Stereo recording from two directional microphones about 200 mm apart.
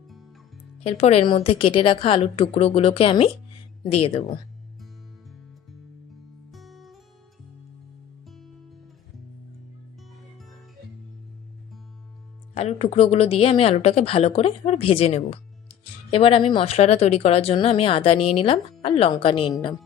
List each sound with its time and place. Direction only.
0.9 s speech: 30° left (ahead or behind)
6.5 s music: centre (ahead or behind)
8.3 s music: centre (ahead or behind)
12.5 s speech: 30° left (ahead or behind)